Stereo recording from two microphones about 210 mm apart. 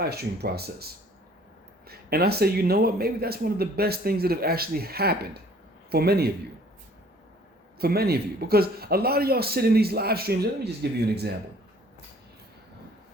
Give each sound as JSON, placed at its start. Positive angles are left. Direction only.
{"t": 0.0, "sound": "speech", "side_deg": -50}
{"t": 1.9, "sound": "speech", "side_deg": -50}
{"t": 7.8, "sound": "speech", "side_deg": -50}